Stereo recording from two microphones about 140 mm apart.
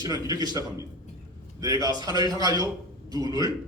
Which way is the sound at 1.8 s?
30° right (ahead or behind).